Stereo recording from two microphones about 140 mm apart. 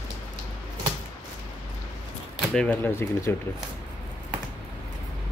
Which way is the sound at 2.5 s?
10° left (ahead or behind).